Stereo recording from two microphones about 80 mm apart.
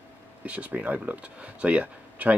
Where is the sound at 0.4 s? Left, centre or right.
Centre.